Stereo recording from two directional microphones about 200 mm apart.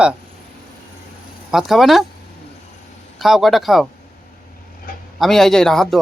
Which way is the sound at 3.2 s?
Centre (ahead or behind).